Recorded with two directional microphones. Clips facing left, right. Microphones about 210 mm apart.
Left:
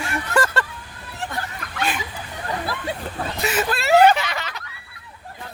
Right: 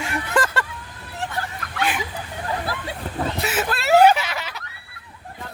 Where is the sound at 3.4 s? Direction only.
5° right (ahead or behind).